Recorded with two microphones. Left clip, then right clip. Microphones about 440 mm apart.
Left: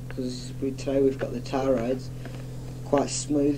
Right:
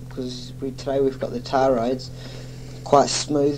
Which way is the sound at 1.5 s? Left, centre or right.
Right.